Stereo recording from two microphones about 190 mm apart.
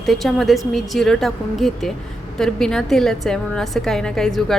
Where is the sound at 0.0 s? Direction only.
Centre (ahead or behind).